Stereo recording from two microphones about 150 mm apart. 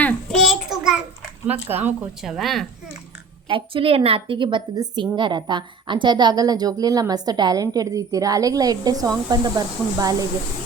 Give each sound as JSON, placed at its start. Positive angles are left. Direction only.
{"t": 0.0, "sound": "a sound", "side_deg": 5}
{"t": 1.5, "sound": "speech", "side_deg": -10}
{"t": 3.5, "sound": "a woman's voice", "side_deg": -35}